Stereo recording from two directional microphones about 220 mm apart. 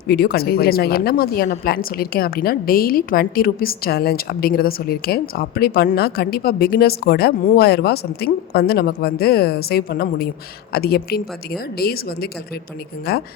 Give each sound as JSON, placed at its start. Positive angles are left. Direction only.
{"t": 0.1, "sound": "a woman's voice", "side_deg": 45}